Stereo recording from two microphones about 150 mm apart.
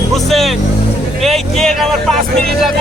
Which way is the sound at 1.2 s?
Centre (ahead or behind).